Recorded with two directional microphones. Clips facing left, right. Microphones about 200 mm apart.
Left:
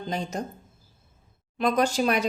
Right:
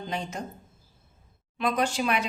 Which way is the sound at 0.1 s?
40° left (ahead or behind).